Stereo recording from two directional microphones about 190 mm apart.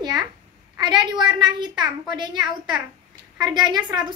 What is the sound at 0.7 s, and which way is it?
A woman's voice, 25° right (ahead or behind).